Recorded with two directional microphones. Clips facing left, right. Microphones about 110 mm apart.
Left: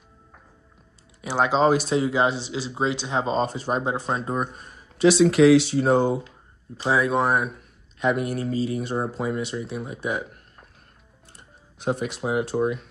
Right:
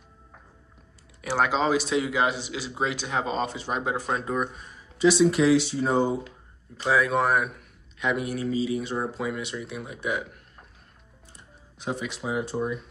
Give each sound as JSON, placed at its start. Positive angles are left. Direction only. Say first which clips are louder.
{"t": 1.2, "sound": "speech", "louder": "left 2 dB", "side_deg": 20}
{"t": 1.6, "sound": "speech", "louder": "left 5 dB", "side_deg": 45}
{"t": 2.0, "sound": "speech", "louder": "left 3 dB", "side_deg": 30}
{"t": 3.8, "sound": "speech", "louder": "left 2 dB", "side_deg": 25}
{"t": 4.4, "sound": "speech", "louder": "left 1 dB", "side_deg": 45}
{"t": 4.9, "sound": "speech", "louder": "left 3 dB", "side_deg": 80}
{"t": 6.8, "sound": "speech", "louder": "left 1 dB", "side_deg": 25}
{"t": 8.0, "sound": "speech", "louder": "left 4 dB", "side_deg": 45}
{"t": 11.3, "sound": "speech", "louder": "left 1 dB", "side_deg": 55}